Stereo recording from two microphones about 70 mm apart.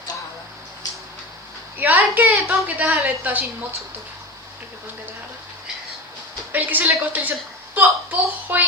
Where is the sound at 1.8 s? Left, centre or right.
Right.